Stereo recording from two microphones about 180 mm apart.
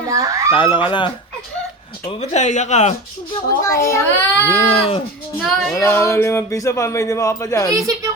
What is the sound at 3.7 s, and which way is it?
Speech, 15° left (ahead or behind).